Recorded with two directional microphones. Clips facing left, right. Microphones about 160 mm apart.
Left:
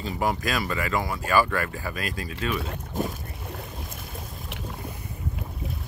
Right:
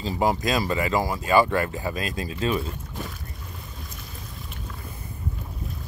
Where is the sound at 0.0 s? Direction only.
20° right (ahead or behind).